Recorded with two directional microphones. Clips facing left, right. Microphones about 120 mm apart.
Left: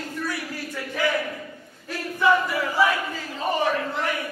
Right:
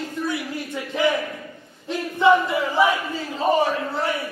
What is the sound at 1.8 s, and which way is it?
Battle cry, 20° right (ahead or behind).